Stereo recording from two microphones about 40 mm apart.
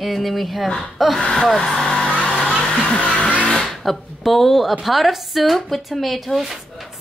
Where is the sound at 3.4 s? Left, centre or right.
Centre.